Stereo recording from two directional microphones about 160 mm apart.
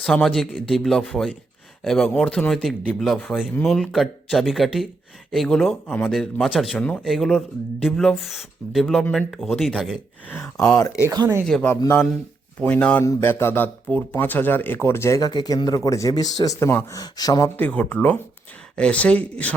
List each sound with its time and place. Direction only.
0.0 s speech: 5° left (ahead or behind)
10.2 s speech: 10° left (ahead or behind)
11.0 s speech: 20° right (ahead or behind)
11.4 s speech: 5° left (ahead or behind)
11.7 s speech: 15° left (ahead or behind)
17.6 s speech: 10° left (ahead or behind)